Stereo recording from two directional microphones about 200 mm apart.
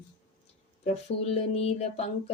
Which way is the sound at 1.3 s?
30° left (ahead or behind).